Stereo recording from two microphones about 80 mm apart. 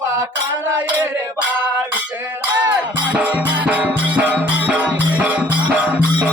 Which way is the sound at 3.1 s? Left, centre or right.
Centre.